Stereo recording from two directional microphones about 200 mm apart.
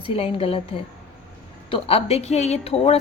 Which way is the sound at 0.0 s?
30° left (ahead or behind).